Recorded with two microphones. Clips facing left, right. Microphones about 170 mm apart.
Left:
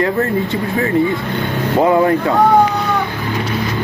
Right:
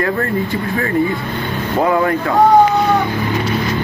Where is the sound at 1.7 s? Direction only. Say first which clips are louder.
Left 3 dB; 20° left (ahead or behind).